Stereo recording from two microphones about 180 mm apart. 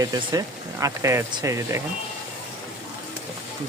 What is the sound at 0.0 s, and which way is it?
Speech, 20° right (ahead or behind).